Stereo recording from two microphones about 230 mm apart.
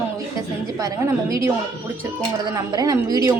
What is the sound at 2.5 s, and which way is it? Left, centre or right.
Speech, centre.